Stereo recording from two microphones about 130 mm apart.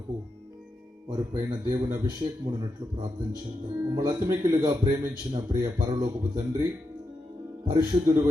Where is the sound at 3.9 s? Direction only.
30° right (ahead or behind).